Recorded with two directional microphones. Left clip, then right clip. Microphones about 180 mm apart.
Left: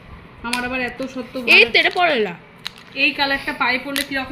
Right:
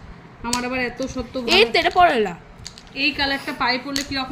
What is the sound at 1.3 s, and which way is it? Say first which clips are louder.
A woman's voice: left 4 dB; 15° right (ahead or behind).